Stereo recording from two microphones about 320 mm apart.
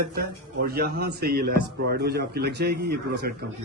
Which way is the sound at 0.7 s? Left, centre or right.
Right.